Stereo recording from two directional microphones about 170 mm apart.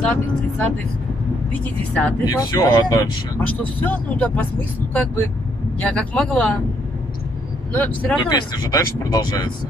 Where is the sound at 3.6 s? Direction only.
10° left (ahead or behind).